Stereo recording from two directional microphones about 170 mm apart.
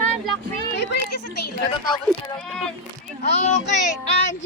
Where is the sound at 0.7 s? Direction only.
85° left.